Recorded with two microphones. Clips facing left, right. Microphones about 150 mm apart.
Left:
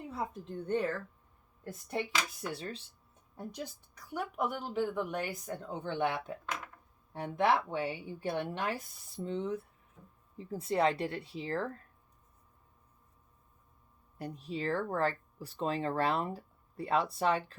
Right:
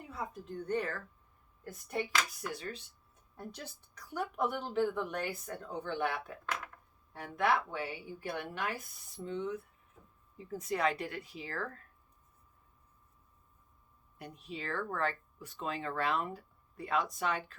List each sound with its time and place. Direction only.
0.1 s a woman's voice: 25° left (ahead or behind)
2.5 s speech: 30° left (ahead or behind)
3.3 s a woman's voice: 15° left (ahead or behind)
14.2 s speech: 35° left (ahead or behind)